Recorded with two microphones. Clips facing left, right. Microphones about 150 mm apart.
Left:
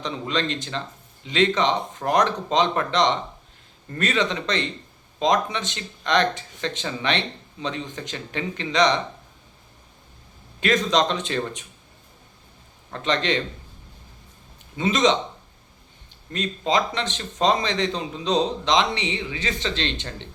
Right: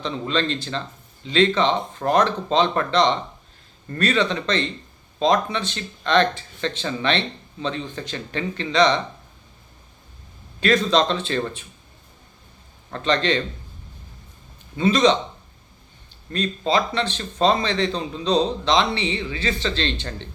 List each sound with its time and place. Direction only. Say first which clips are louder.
0.0 s a man's voice: right 2 dB; 15° left (ahead or behind)
10.6 s a man's voice: right 2 dB; 20° left (ahead or behind)
12.9 s a man's voice: right 2 dB; 20° left (ahead or behind)
14.8 s a man's voice: right 3 dB; 20° left (ahead or behind)
16.3 s a man's voice: right 2 dB; 15° left (ahead or behind)